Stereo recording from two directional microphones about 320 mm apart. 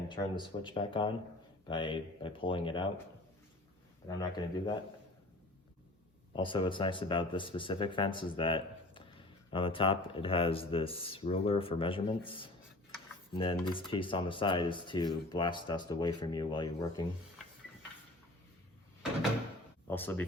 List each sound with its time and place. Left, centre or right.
0.1 s speech: centre
4.4 s speech: centre
6.3 s speech: centre
19.9 s speech: centre